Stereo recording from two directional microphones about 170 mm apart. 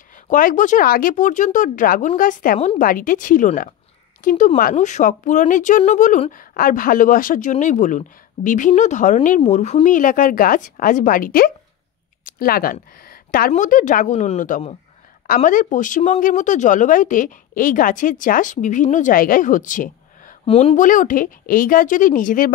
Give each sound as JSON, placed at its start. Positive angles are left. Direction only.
{"t": 0.1, "sound": "a woman's voice", "side_deg": 55}
{"t": 12.9, "sound": "a sound", "side_deg": 60}
{"t": 13.5, "sound": "a woman's voice", "side_deg": 50}
{"t": 20.4, "sound": "a woman's voice", "side_deg": 35}